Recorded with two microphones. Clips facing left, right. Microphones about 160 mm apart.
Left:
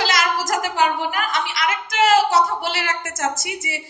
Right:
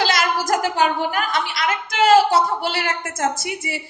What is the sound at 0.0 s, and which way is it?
A woman's voice, 55° right (ahead or behind).